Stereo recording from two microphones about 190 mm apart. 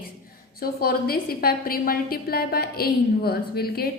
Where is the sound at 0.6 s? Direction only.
55° left (ahead or behind).